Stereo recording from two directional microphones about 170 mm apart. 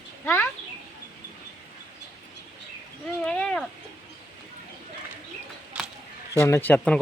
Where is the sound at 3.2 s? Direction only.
5° left (ahead or behind).